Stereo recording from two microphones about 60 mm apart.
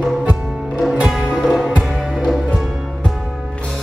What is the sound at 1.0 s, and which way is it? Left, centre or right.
Music, centre.